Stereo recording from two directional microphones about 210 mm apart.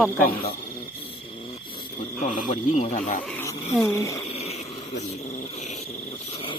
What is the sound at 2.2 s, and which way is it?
Speech, 35° left (ahead or behind).